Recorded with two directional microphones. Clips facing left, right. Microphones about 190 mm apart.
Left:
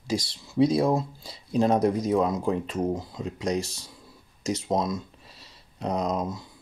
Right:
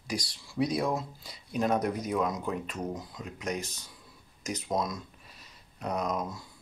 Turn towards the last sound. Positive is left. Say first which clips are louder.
# left 4 dB
turn(degrees=30)  # may be behind; listen again after turning